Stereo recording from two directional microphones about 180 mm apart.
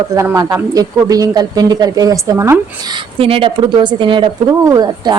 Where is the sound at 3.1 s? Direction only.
30° right (ahead or behind).